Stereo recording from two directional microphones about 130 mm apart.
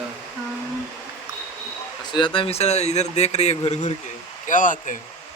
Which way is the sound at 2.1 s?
40° left (ahead or behind).